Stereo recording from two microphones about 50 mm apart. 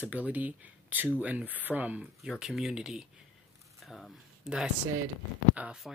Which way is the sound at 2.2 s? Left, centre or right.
Centre.